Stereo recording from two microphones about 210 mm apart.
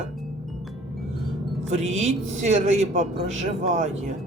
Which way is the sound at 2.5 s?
35° right (ahead or behind).